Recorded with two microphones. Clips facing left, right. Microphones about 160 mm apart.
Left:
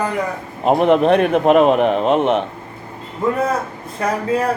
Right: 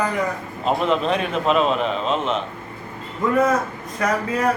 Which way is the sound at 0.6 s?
60° left (ahead or behind).